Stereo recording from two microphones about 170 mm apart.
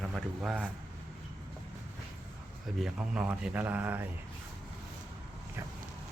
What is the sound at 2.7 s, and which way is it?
A man's voice, 5° right (ahead or behind).